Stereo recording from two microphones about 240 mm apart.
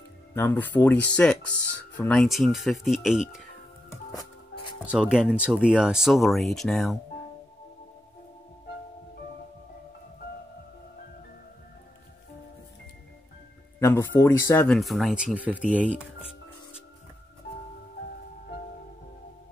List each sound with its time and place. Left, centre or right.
0.3 s speech: centre
4.8 s speech: centre
13.7 s speech: centre